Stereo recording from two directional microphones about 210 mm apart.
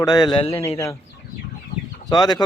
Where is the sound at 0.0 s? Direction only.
20° left (ahead or behind).